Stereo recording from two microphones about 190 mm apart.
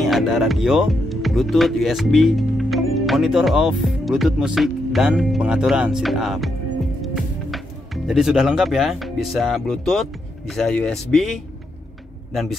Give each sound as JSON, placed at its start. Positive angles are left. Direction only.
{"t": 0.0, "sound": "speech", "side_deg": 0}